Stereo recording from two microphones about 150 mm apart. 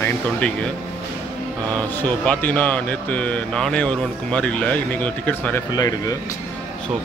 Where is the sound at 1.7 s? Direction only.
10° left (ahead or behind).